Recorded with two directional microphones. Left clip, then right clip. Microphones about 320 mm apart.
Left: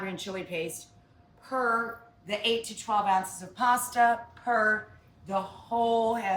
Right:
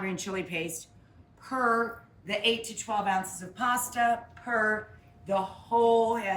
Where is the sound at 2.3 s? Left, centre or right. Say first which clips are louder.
Right 1 dB; centre.